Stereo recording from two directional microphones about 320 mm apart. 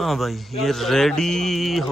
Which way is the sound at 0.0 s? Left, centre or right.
Centre.